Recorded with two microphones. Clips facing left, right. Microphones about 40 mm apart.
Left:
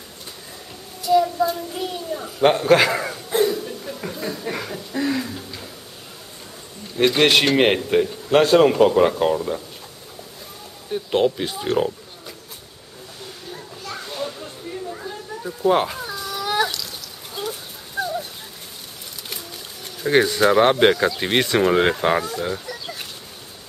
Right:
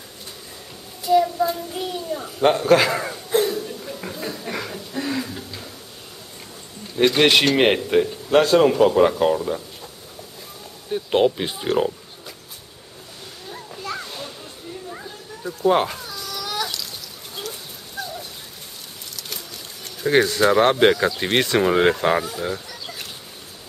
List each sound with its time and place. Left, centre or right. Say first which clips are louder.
1.1 s child singing: even; centre
1.9 s a sound: right 1 dB; centre
2.4 s chuckle: left 1 dB; centre
7.0 s speech: even; centre
8.3 s speech: left 1 dB; centre
10.9 s speech: right 1 dB; centre
13.5 s a sound: right 4 dB; centre
14.0 s music: left 5 dB; centre
15.0 s a sound: left 4 dB; centre
16.0 s cat: left 4 dB; centre
18.0 s a sound: left 6 dB; left
20.0 s speech: even; centre
22.7 s chicken: left 3 dB; centre